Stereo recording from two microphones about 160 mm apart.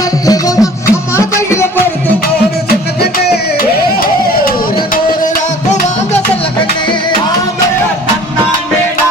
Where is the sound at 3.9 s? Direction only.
65° left (ahead or behind).